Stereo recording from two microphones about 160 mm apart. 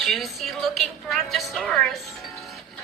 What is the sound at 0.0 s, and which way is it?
A woman's voice, centre (ahead or behind).